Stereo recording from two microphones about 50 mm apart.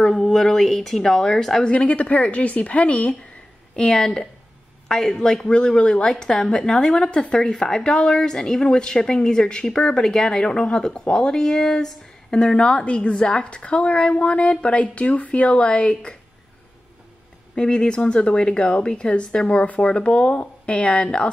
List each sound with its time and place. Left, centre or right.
0.0 s a woman's voice: centre
1.6 s a woman's voice: left
3.7 s a woman's voice: centre
17.6 s a woman's voice: centre